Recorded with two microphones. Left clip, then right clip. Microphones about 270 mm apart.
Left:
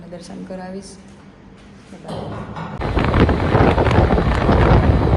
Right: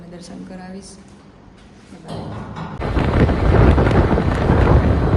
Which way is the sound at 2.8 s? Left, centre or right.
Centre.